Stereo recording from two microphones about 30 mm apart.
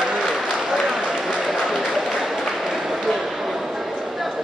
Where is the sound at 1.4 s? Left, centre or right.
Centre.